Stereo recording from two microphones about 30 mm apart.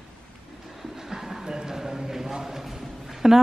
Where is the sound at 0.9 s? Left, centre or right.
Centre.